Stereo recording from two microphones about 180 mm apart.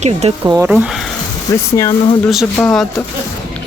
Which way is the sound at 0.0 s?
35° right (ahead or behind).